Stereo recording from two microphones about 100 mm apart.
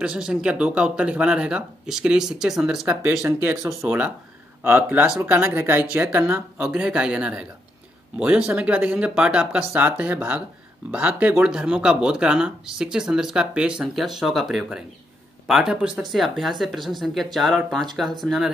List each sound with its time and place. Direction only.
0.0 s speech: 10° right (ahead or behind)
3.3 s speech: 25° right (ahead or behind)
3.8 s speech: 10° right (ahead or behind)
6.6 s speech: 10° right (ahead or behind)